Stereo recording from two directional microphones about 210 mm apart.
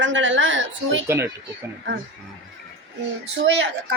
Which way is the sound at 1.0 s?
15° right (ahead or behind).